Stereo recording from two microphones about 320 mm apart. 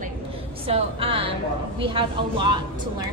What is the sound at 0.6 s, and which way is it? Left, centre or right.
A woman's voice, centre.